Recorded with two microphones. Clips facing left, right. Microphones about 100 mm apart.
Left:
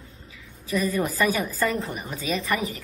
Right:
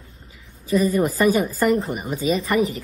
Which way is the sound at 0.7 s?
30° right (ahead or behind).